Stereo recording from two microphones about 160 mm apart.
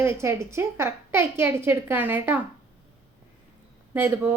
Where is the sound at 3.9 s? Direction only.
15° right (ahead or behind).